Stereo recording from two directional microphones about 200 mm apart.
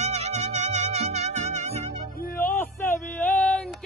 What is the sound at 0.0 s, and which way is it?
Music, 35° right (ahead or behind).